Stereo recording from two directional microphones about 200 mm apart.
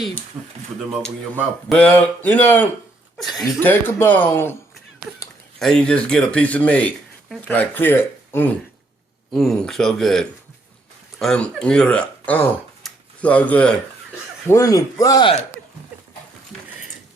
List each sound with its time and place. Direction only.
1.7 s speech: 5° left (ahead or behind)
5.5 s speech: 5° left (ahead or behind)